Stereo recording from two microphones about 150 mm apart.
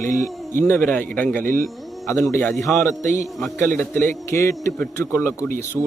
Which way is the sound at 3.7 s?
15° left (ahead or behind).